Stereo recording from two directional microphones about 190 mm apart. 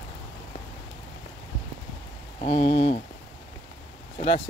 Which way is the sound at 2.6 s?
25° left (ahead or behind).